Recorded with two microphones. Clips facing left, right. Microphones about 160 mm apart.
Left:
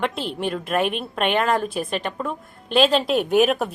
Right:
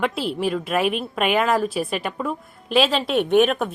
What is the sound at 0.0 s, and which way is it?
A woman's voice, 5° right (ahead or behind).